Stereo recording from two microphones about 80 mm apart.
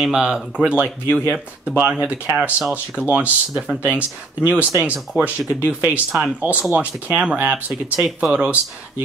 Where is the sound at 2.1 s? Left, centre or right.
Centre.